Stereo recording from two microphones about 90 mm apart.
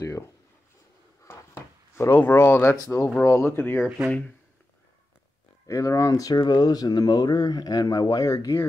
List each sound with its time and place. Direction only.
0.0 s speech: 35° left (ahead or behind)
1.2 s a sound: 30° left (ahead or behind)
2.1 s speech: 20° left (ahead or behind)
5.7 s speech: 35° left (ahead or behind)